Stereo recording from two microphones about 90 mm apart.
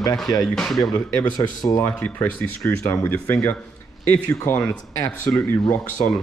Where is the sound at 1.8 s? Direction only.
35° left (ahead or behind).